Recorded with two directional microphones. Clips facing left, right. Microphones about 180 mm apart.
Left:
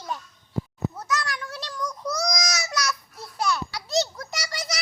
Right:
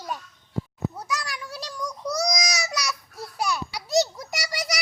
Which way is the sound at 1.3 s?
10° right (ahead or behind).